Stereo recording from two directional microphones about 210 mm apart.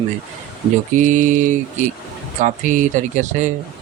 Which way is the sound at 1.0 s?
35° right (ahead or behind).